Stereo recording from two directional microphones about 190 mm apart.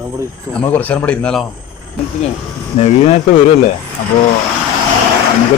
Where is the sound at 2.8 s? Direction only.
35° left (ahead or behind).